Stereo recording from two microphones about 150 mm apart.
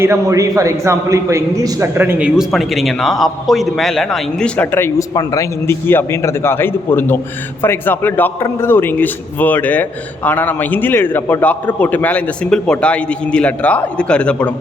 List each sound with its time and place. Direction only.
0.0 s a man's voice: 20° right (ahead or behind)
2.4 s a man's voice: centre (ahead or behind)